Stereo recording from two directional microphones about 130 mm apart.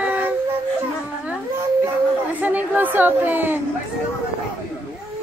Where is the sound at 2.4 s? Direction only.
10° right (ahead or behind).